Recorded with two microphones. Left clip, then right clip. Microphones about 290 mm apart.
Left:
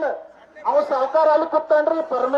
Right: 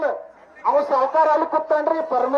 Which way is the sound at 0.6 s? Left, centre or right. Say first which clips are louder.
Right 1 dB; centre.